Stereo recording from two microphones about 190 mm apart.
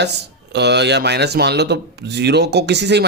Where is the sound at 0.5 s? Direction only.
65° right (ahead or behind).